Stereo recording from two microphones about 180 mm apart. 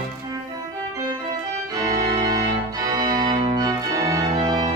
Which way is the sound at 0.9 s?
20° right (ahead or behind).